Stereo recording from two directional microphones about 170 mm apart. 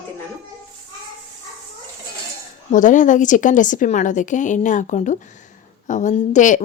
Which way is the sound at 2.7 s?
50° left (ahead or behind).